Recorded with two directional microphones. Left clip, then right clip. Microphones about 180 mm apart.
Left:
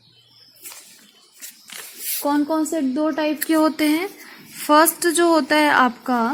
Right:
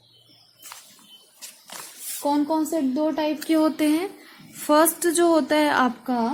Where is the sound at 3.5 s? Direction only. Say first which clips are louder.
Left 2 dB; 20° left (ahead or behind).